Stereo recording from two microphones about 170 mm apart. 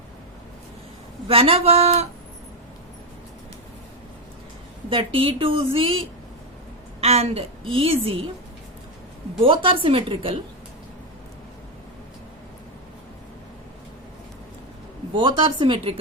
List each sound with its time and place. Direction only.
1.3 s a woman's voice: 35° right (ahead or behind)
4.9 s a woman's voice: 30° right (ahead or behind)
7.0 s a woman's voice: 35° right (ahead or behind)
9.4 s a woman's voice: 30° right (ahead or behind)
15.1 s speech: 25° right (ahead or behind)